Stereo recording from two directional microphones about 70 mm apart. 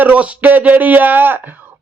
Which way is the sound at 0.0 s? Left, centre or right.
Right.